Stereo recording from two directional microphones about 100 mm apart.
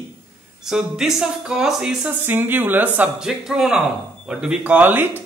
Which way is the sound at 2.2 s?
20° right (ahead or behind).